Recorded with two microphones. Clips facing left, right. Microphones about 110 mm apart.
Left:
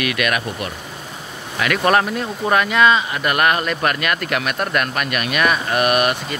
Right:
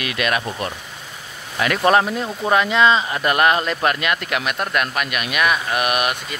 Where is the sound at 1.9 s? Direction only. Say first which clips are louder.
Right 1 dB; 15° right (ahead or behind).